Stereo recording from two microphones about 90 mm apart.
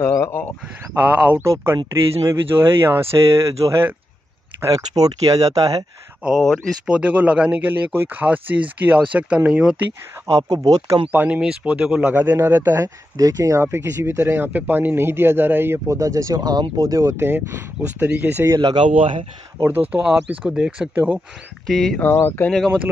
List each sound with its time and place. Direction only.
0.0 s a sound: 35° left (ahead or behind)
1.0 s speech: 15° right (ahead or behind)
1.4 s speech: 30° right (ahead or behind)
4.6 s speech: 40° right (ahead or behind)
6.9 s speech: 15° right (ahead or behind)
10.2 s speech: 45° right (ahead or behind)
11.1 s speech: 15° right (ahead or behind)
18.6 s speech: 65° right (ahead or behind); by 19.2 s 85° right
19.9 s speech: 10° right (ahead or behind)
21.6 s speech: 5° left (ahead or behind)
22.0 s speech: 20° left (ahead or behind)